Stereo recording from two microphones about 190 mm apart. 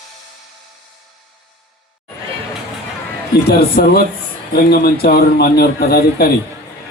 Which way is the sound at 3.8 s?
55° left (ahead or behind).